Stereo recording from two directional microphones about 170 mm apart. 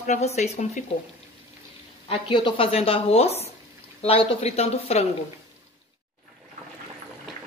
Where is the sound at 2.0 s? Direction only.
30° left (ahead or behind).